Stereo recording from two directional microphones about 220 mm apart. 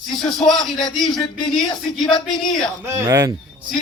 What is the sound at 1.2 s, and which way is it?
Speech, 20° left (ahead or behind).